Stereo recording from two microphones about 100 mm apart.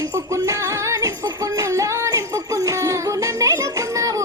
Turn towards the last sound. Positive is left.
turn(degrees=-35)  # may be behind; listen again after turning